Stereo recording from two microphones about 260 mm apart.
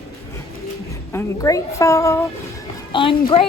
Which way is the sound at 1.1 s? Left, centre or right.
Centre.